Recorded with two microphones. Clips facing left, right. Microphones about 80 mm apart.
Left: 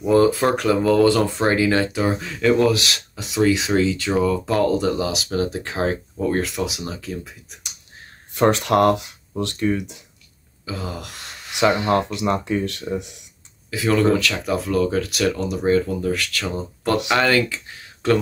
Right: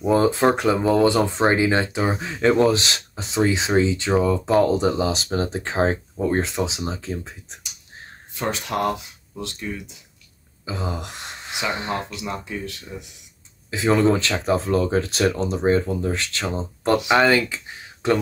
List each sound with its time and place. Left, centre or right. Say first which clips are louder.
0.0 s speech: left 1 dB; right
8.4 s speech: left 8 dB; left
10.6 s a sound: right 1 dB; right
11.6 s speech: left 9 dB; left
13.7 s speech: even; right